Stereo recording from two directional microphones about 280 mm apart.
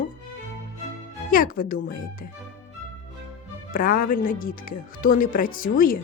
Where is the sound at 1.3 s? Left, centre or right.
Left.